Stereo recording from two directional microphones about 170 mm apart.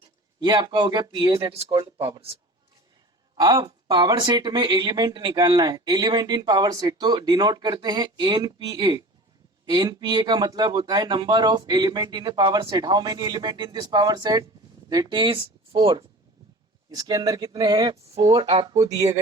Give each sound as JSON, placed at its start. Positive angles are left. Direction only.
{"t": 0.3, "sound": "speech", "side_deg": -25}
{"t": 3.4, "sound": "speech", "side_deg": -25}